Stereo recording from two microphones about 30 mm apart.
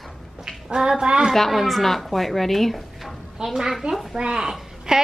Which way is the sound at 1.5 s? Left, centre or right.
Centre.